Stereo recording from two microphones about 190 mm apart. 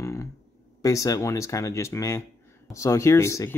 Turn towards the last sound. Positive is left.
turn(degrees=15)  # may be behind; listen again after turning